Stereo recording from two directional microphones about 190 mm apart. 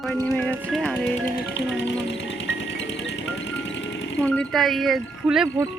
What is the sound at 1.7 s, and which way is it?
Music, 70° left (ahead or behind).